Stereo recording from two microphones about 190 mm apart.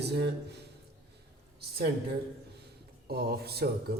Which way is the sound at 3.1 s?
55° right (ahead or behind).